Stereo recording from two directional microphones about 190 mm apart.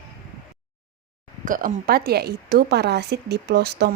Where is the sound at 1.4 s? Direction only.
45° right (ahead or behind).